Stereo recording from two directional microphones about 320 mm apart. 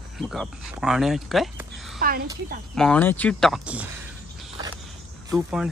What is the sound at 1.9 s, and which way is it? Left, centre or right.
Speech, right.